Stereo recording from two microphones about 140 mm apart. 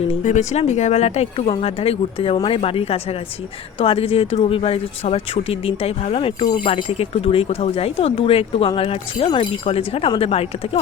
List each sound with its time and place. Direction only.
0.1 s speech: 55° left (ahead or behind)